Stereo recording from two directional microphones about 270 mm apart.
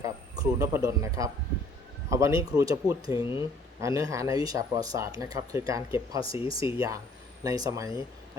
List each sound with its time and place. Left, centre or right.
0.0 s speech: centre
3.2 s speech: centre
3.8 s speech: centre
6.2 s speech: centre
6.7 s speech: centre